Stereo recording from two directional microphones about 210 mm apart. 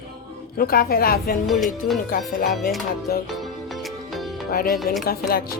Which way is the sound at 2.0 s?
40° left (ahead or behind).